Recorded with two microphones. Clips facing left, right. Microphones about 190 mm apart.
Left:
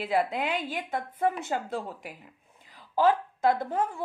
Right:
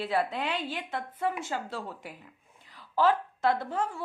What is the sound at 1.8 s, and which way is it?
A woman's voice, 10° left (ahead or behind).